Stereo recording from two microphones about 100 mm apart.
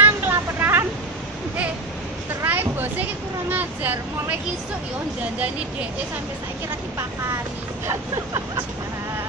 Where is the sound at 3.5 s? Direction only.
20° right (ahead or behind).